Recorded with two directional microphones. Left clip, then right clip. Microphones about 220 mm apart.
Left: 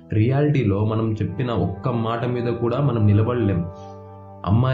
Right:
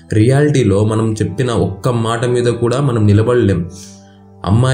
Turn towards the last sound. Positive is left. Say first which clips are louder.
# right 6 dB
turn(degrees=-10)  # may be behind; listen again after turning